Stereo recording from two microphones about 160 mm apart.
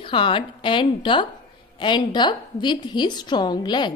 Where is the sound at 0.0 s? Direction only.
30° left (ahead or behind).